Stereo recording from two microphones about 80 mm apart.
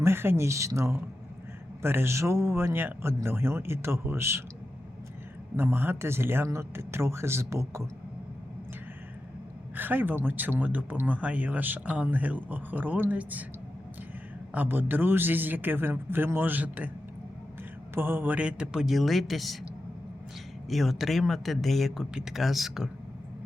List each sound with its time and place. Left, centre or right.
0.0 s speech: right
5.5 s speech: right
9.7 s speech: right
14.5 s speech: right
17.9 s a man's voice: right; by 19.5 s centre
20.7 s speech: centre